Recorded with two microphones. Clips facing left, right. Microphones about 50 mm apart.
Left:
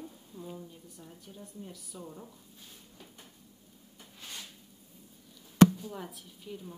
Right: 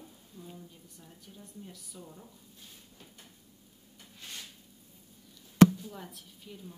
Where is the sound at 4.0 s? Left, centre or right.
Centre.